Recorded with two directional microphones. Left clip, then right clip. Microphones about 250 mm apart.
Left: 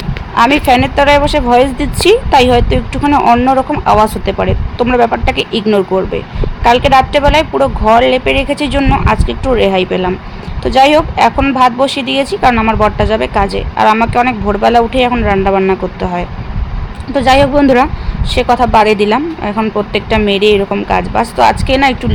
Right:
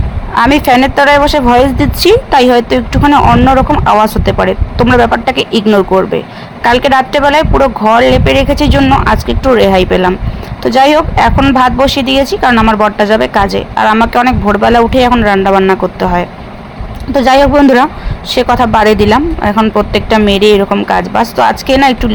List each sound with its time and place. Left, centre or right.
0.3 s a woman's voice: centre